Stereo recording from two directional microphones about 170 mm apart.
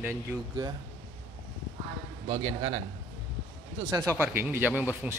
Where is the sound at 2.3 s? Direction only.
30° right (ahead or behind).